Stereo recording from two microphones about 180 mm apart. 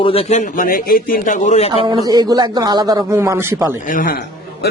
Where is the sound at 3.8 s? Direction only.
50° left (ahead or behind).